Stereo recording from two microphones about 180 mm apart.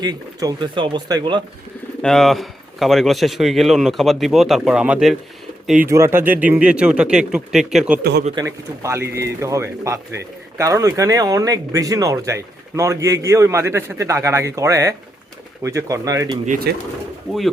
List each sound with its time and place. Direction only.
0.0 s speech: 20° right (ahead or behind)
2.0 s speech: centre (ahead or behind)
8.4 s speech: 15° right (ahead or behind)
16.5 s speech: 60° right (ahead or behind)